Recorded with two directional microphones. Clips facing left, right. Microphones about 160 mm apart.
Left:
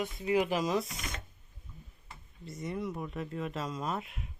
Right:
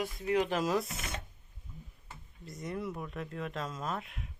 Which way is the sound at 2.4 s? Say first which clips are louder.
Left 1 dB; centre (ahead or behind).